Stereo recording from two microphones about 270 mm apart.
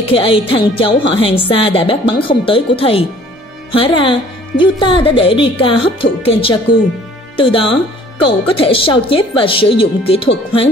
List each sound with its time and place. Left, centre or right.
0.1 s speech: centre